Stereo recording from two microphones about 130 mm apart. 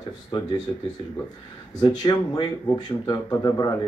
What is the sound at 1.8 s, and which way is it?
Speech, 30° left (ahead or behind).